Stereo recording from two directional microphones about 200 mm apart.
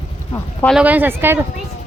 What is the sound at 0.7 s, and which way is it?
Speech, 5° right (ahead or behind).